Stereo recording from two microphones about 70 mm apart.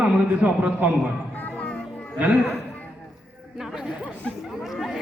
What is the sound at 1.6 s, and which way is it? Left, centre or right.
Music, centre.